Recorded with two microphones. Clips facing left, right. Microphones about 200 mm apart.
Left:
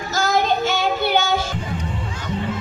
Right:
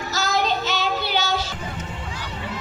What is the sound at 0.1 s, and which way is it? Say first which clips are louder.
Child singing: left 4 dB; 50° left (ahead or behind).